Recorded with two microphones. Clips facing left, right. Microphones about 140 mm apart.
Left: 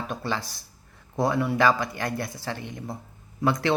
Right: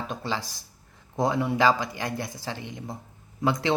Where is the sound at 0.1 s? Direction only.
20° right (ahead or behind).